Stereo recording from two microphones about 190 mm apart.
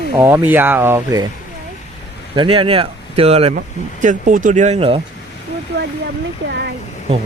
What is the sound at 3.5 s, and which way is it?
Speech, 40° right (ahead or behind).